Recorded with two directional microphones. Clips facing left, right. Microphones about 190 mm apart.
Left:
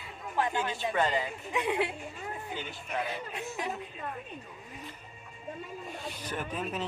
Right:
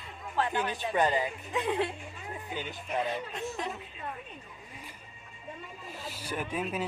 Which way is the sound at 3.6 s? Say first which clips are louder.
Left 2 dB; 10° left (ahead or behind).